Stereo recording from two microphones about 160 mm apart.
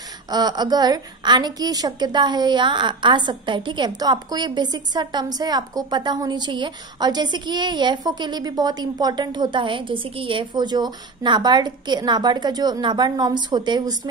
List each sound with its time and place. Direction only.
0.3 s a woman's voice: 25° right (ahead or behind)